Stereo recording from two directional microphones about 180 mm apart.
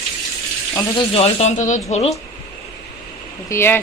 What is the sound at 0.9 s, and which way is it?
Speech, 35° left (ahead or behind).